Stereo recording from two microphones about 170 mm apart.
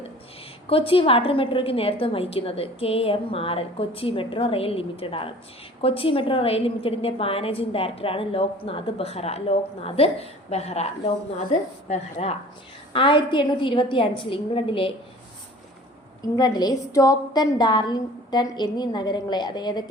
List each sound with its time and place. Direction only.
0.7 s a woman's voice: 35° left (ahead or behind)
11.9 s a woman's voice: 35° left (ahead or behind)
16.2 s a woman's voice: 20° left (ahead or behind)